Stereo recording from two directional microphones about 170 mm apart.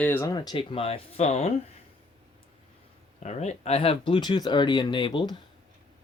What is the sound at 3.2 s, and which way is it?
Speech, 40° left (ahead or behind).